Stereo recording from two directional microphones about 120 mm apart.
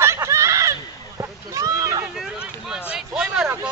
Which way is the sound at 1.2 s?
30° right (ahead or behind).